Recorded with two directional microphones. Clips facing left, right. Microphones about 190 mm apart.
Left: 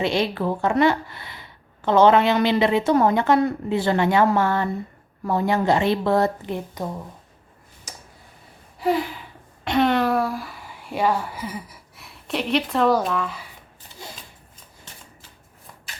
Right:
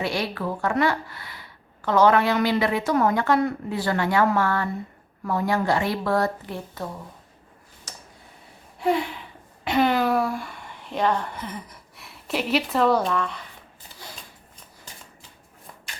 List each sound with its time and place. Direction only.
0.0 s speech: 25° left (ahead or behind)
8.8 s gasp: centre (ahead or behind)
9.6 s speech: centre (ahead or behind)